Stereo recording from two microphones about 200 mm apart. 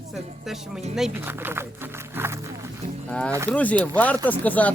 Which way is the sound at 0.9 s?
5° right (ahead or behind).